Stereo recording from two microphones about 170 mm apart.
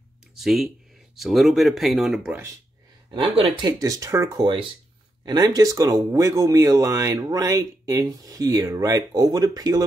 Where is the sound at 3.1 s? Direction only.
30° right (ahead or behind).